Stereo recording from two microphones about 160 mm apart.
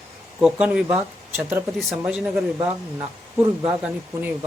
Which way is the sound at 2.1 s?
5° right (ahead or behind).